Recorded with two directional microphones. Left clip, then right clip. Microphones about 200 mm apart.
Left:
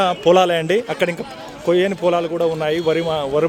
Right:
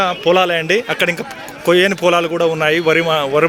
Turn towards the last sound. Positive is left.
turn(degrees=5)  # may be behind; listen again after turning